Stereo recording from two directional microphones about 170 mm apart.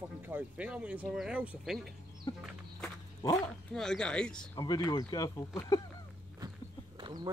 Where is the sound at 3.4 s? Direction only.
5° left (ahead or behind).